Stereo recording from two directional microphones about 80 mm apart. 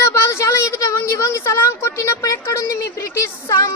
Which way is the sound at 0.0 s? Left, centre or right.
Left.